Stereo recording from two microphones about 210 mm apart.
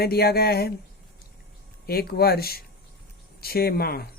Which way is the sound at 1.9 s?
45° left (ahead or behind).